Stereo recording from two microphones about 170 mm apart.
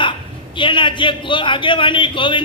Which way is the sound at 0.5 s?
30° left (ahead or behind).